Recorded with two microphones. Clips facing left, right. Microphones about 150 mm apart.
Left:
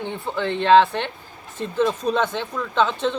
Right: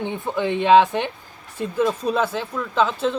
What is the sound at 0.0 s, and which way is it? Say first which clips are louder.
Speech: right 2 dB; 15° right (ahead or behind).